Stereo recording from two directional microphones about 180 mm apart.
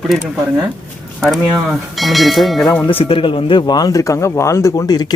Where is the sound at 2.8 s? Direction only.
30° left (ahead or behind).